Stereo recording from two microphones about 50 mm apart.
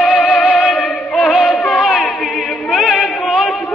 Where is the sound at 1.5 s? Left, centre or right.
Left.